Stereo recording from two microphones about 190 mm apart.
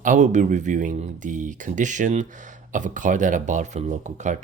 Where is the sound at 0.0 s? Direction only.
40° right (ahead or behind).